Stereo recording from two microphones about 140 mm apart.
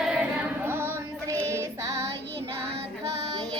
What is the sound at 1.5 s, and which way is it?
Child singing, 20° right (ahead or behind).